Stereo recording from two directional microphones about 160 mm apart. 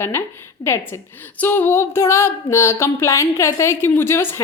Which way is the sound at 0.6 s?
15° left (ahead or behind).